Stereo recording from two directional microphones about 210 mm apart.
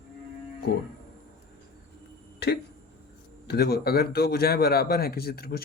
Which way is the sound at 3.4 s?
50° left (ahead or behind).